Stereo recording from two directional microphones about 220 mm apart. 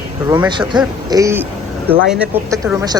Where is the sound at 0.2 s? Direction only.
20° right (ahead or behind).